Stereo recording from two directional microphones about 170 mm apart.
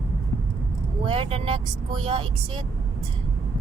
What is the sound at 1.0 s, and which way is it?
Speech, 30° right (ahead or behind).